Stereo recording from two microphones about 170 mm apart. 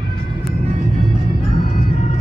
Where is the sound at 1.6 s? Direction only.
50° left (ahead or behind).